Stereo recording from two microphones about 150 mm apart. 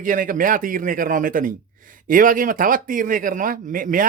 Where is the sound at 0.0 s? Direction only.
65° right (ahead or behind).